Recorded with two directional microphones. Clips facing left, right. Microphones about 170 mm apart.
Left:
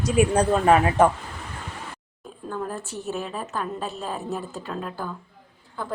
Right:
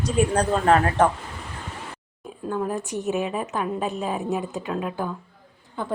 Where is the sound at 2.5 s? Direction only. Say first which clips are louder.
Right 5 dB; 15° right (ahead or behind).